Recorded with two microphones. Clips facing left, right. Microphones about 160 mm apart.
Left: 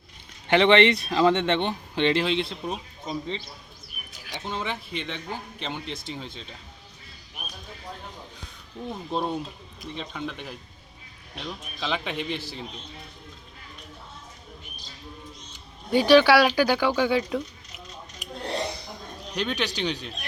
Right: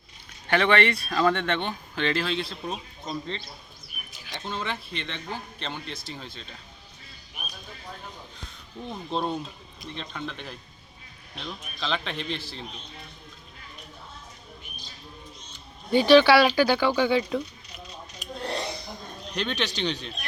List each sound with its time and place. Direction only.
0.4 s a man's voice: 20° left (ahead or behind)
8.9 s a man's voice: 10° left (ahead or behind)
15.9 s a man's voice: 10° left (ahead or behind)
19.3 s a man's voice: 10° left (ahead or behind)